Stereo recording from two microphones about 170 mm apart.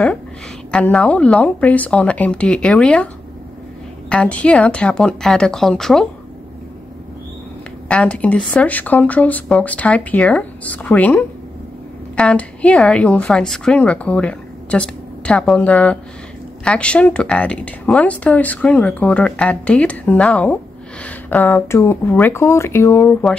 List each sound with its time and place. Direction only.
0.7 s speech: 5° left (ahead or behind)
4.1 s speech: 5° left (ahead or behind)
7.9 s speech: 5° left (ahead or behind)